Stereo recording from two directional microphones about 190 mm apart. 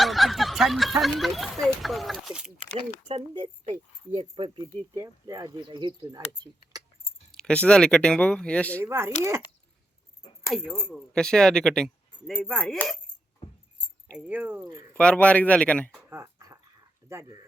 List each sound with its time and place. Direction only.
0.0 s snicker: centre (ahead or behind)
1.0 s speech: centre (ahead or behind)
3.2 s speech: 25° right (ahead or behind)
7.3 s speech: 5° left (ahead or behind)
8.8 s speech: 15° right (ahead or behind)
10.4 s speech: centre (ahead or behind)
14.3 s speech: 10° right (ahead or behind)
14.9 s speech: 5° left (ahead or behind)
16.0 s dog: 15° right (ahead or behind)
17.1 s speech: 15° right (ahead or behind)